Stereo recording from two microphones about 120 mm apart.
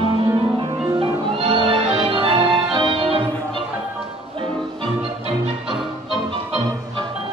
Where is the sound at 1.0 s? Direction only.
50° right (ahead or behind).